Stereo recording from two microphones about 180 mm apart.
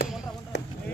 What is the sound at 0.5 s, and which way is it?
Basketball bounce, 70° left (ahead or behind).